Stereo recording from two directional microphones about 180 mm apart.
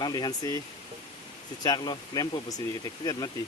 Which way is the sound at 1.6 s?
20° left (ahead or behind).